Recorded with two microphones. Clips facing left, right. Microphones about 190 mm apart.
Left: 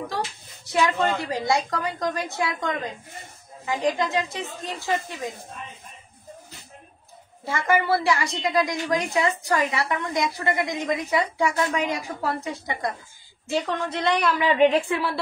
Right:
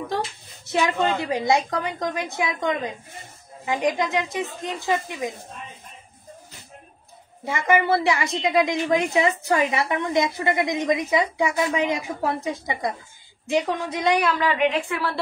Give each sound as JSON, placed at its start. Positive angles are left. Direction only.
{"t": 0.7, "sound": "a woman's voice", "side_deg": -25}
{"t": 7.4, "sound": "a woman's voice", "side_deg": -20}
{"t": 14.6, "sound": "a woman's voice", "side_deg": 35}